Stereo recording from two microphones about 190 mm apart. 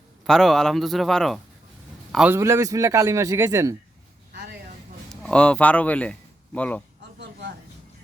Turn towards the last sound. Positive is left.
turn(degrees=-65)  # may be behind; listen again after turning